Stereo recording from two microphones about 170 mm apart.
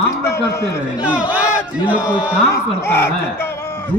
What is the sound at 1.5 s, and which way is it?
Battle cry, 10° right (ahead or behind).